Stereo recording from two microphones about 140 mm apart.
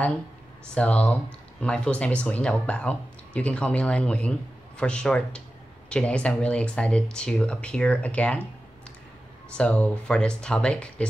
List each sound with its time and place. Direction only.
0.7 s speech: 10° left (ahead or behind)
9.5 s speech: 10° left (ahead or behind)